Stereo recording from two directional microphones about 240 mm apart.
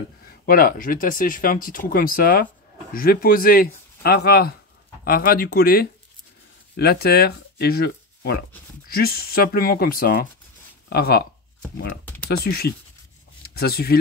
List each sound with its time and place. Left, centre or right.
0.5 s speech: left
12.3 s speech: left
13.4 s a sound: left